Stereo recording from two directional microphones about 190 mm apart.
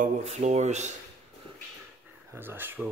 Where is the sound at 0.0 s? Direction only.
35° right (ahead or behind).